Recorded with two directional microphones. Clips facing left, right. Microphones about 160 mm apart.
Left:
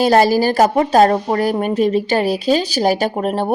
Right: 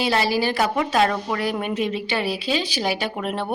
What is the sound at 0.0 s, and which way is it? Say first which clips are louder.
Speech: left 8 dB; 45° left (ahead or behind).